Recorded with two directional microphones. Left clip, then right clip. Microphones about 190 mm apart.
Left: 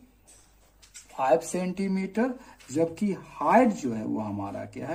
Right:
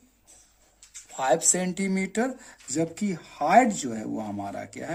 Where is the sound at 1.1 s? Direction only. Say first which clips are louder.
Even; 35° right (ahead or behind).